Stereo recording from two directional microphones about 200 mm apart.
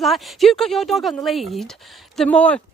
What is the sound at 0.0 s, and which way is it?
A woman's voice, centre (ahead or behind).